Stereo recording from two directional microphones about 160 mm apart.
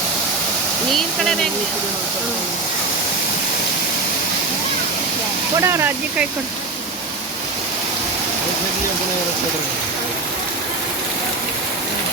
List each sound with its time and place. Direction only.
0.9 s speech: centre (ahead or behind)
5.5 s speech: 15° right (ahead or behind)